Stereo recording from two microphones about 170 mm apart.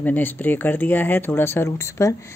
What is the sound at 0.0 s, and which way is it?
Speech, 10° left (ahead or behind).